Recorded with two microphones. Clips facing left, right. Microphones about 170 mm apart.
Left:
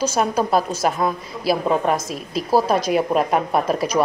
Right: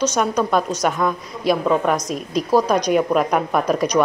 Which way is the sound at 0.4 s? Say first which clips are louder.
Even; 30° left (ahead or behind).